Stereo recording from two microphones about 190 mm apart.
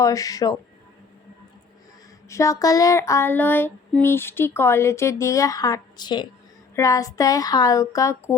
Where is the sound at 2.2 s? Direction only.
15° left (ahead or behind).